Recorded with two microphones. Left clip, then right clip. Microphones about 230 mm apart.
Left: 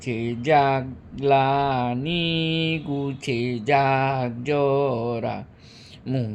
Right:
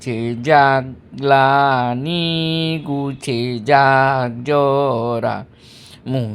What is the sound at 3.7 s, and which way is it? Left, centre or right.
Speech, centre.